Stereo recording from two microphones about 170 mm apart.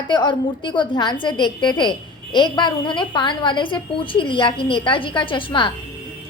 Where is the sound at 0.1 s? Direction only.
25° left (ahead or behind).